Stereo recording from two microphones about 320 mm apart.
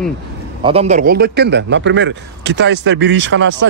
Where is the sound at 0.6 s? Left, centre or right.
Centre; by 3.7 s right.